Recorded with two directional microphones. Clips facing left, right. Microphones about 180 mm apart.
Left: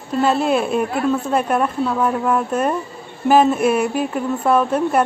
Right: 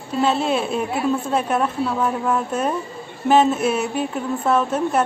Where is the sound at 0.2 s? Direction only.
Centre (ahead or behind).